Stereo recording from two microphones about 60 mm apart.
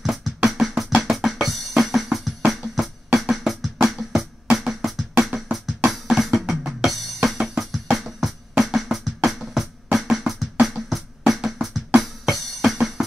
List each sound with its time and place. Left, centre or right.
0.0 s drum: centre
1.1 s music: centre
5.9 s drum: centre
9.9 s music: centre